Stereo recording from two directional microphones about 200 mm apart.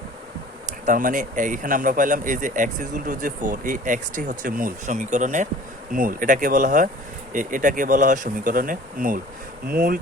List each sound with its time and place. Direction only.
0.9 s speech: 40° right (ahead or behind)